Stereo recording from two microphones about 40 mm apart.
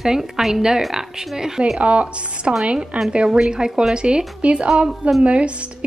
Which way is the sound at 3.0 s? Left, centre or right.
Centre.